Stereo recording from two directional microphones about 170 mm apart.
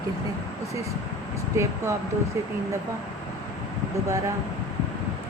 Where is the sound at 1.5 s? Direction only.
15° right (ahead or behind).